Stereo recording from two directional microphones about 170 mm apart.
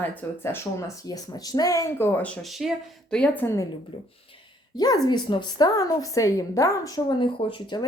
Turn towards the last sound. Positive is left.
turn(degrees=30)  # may be behind; listen again after turning